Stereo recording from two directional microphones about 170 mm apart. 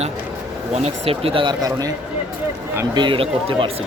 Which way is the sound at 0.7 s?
35° right (ahead or behind).